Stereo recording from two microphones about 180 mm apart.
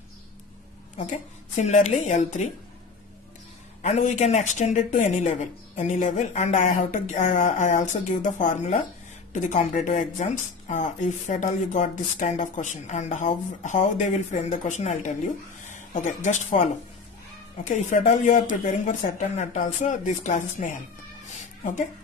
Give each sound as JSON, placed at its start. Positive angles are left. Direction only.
{"t": 0.9, "sound": "speech", "side_deg": 45}
{"t": 3.8, "sound": "speech", "side_deg": 35}
{"t": 17.6, "sound": "speech", "side_deg": 45}
{"t": 21.3, "sound": "cat", "side_deg": 45}